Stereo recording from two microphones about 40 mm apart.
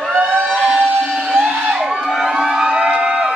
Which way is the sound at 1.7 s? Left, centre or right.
Right.